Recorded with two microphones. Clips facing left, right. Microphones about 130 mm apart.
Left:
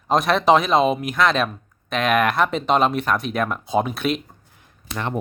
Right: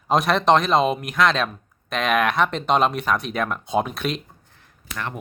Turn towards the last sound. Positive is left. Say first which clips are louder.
# left 5 dB
turn(degrees=25)  # may be behind; listen again after turning